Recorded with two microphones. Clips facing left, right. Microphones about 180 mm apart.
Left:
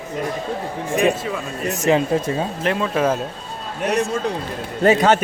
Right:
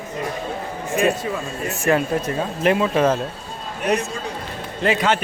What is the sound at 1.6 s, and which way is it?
Speech, 20° left (ahead or behind).